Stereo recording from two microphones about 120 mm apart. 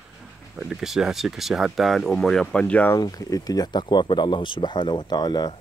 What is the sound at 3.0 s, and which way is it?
A man's voice, 30° left (ahead or behind).